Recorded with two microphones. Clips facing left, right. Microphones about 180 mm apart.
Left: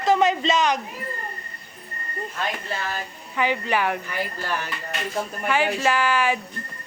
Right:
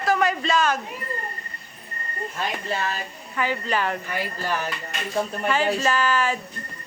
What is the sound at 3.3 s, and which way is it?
Speech, 15° left (ahead or behind).